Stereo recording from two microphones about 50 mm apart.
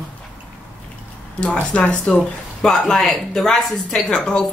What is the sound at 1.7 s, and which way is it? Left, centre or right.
Speech, left.